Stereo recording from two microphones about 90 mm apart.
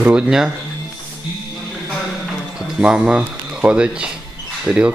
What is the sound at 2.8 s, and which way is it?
Speech, 10° right (ahead or behind).